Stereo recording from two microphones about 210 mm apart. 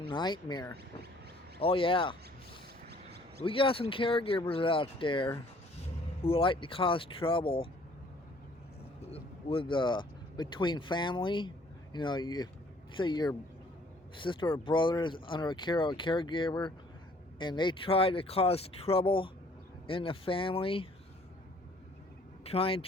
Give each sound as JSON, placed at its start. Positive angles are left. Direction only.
{"t": 0.1, "sound": "speech", "side_deg": 20}
{"t": 2.9, "sound": "a sound", "side_deg": -50}
{"t": 3.4, "sound": "speech", "side_deg": 25}
{"t": 9.0, "sound": "speech", "side_deg": 25}
{"t": 22.4, "sound": "speech", "side_deg": 25}